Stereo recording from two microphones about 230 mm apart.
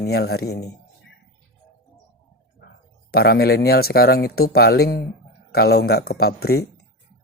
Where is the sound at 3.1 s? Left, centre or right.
Left.